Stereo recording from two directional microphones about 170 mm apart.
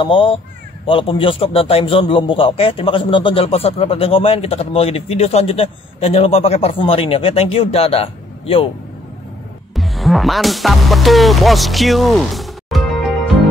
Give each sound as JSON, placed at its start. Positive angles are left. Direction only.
{"t": 0.0, "sound": "a man's voice", "side_deg": 30}
{"t": 9.8, "sound": "music", "side_deg": 0}